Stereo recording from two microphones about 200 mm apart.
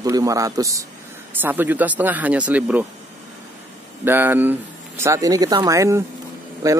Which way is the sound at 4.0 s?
10° right (ahead or behind).